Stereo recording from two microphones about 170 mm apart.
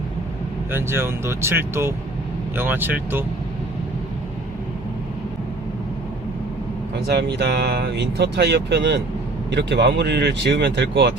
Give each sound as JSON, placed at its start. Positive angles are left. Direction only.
{"t": 0.7, "sound": "speech", "side_deg": -15}
{"t": 7.1, "sound": "speech", "side_deg": -80}